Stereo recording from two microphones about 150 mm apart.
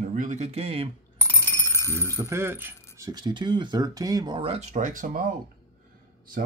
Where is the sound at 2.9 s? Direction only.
25° right (ahead or behind).